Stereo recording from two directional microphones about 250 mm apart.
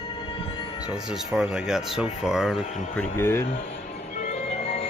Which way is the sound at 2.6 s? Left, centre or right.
Left.